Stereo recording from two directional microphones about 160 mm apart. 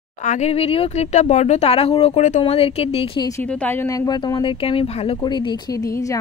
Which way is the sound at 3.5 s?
10° left (ahead or behind).